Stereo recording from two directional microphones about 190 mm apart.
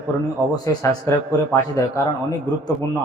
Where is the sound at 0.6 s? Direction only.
15° left (ahead or behind).